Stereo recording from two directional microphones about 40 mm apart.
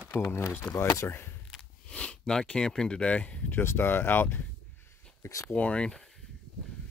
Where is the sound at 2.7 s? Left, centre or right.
Centre.